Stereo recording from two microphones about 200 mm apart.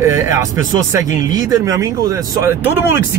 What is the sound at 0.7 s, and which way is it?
Speech, 15° right (ahead or behind).